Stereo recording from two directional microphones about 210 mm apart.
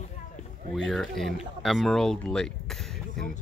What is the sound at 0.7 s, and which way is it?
Speech, centre (ahead or behind).